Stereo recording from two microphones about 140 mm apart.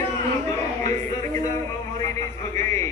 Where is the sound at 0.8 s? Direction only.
25° left (ahead or behind).